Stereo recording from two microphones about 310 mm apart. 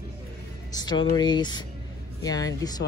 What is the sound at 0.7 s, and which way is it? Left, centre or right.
Speech, centre.